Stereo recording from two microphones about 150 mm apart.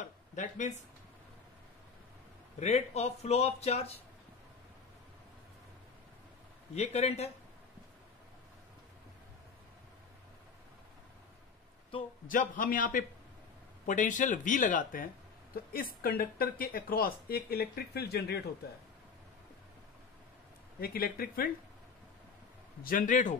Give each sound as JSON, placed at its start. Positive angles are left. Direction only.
{"t": 0.0, "sound": "a sound", "side_deg": 55}
{"t": 2.6, "sound": "speech", "side_deg": 50}
{"t": 6.7, "sound": "speech", "side_deg": 45}
{"t": 12.3, "sound": "speech", "side_deg": 65}
{"t": 15.5, "sound": "speech", "side_deg": 85}
{"t": 20.8, "sound": "speech", "side_deg": 80}
{"t": 22.8, "sound": "speech", "side_deg": 65}